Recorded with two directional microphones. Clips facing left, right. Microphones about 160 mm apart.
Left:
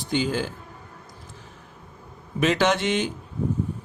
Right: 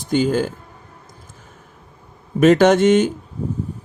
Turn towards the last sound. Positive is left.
turn(degrees=-50)  # may be behind; listen again after turning